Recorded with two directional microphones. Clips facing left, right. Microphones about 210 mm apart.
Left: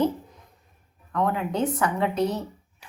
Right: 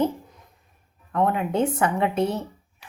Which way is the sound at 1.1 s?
25° right (ahead or behind).